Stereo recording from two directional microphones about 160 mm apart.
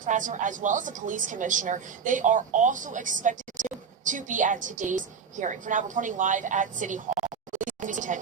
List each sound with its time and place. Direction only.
0.0 s a woman's voice: 55° right (ahead or behind)